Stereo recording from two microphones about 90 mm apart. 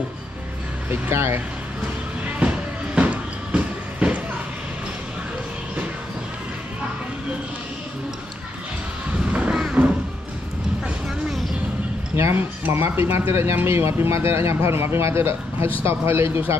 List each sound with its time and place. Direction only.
0.8 s speech: 25° right (ahead or behind)
2.2 s music: 15° right (ahead or behind)
9.2 s a sound: 15° right (ahead or behind)
11.2 s vehicle: centre (ahead or behind)
12.2 s speech: 25° right (ahead or behind)